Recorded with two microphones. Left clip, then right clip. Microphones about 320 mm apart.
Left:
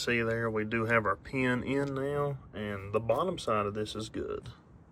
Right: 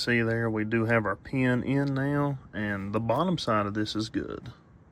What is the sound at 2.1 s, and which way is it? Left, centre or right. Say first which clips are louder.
Speech: right 3 dB; left.